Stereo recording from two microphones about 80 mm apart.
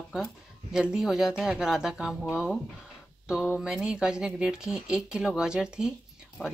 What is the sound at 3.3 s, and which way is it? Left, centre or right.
Speech, centre.